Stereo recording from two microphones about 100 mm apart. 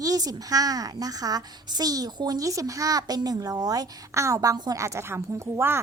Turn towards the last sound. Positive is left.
turn(degrees=-25)  # may be behind; listen again after turning